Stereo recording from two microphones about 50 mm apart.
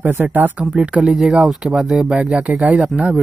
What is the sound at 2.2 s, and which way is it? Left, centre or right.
Speech, centre.